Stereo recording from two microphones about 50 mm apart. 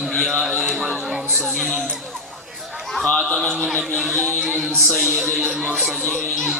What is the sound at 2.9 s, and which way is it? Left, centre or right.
Speech, centre.